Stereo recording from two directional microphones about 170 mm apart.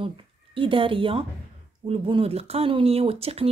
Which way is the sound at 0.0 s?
30° right (ahead or behind).